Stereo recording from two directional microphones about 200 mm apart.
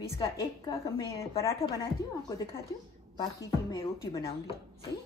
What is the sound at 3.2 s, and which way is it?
Speech, 20° left (ahead or behind).